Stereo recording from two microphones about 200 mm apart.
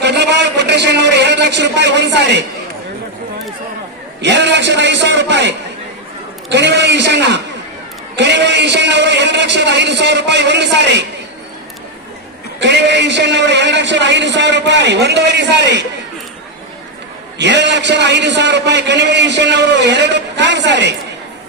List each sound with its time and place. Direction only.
0.0 s a man's voice: 60° right (ahead or behind)
4.2 s a man's voice: 60° right (ahead or behind)
12.5 s a man's voice: 60° right (ahead or behind)
17.3 s a man's voice: 60° right (ahead or behind)